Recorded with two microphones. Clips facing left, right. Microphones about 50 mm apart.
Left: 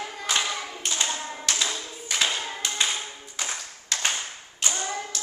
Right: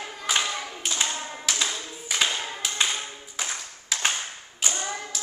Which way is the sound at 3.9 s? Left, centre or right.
Centre.